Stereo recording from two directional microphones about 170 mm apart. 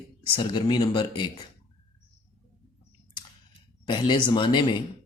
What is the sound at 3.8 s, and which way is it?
Speech, 25° left (ahead or behind).